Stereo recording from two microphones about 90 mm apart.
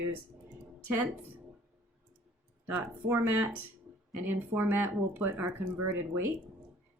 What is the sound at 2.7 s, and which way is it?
Speech, 20° right (ahead or behind).